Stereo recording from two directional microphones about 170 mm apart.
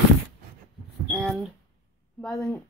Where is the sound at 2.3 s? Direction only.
15° left (ahead or behind).